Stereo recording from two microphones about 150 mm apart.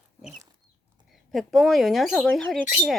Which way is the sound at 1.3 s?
Centre (ahead or behind).